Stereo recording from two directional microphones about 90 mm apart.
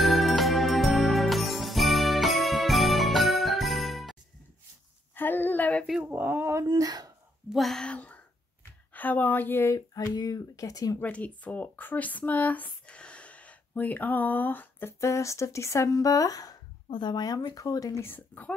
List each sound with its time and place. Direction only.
0.0 s music: centre (ahead or behind)
5.1 s a sound: 20° left (ahead or behind)
5.9 s speech: 5° right (ahead or behind)
6.1 s speech: 25° right (ahead or behind)
6.7 s speech: 45° right (ahead or behind)
7.4 s speech: centre (ahead or behind); by 9.8 s 30° left (ahead or behind)
10.1 s speech: 45° left (ahead or behind)
11.0 s speech: 15° left (ahead or behind); by 16.5 s 40° left (ahead or behind)
16.9 s speech: 60° left (ahead or behind); by 18.0 s 40° left (ahead or behind)
18.0 s speech: 20° left (ahead or behind)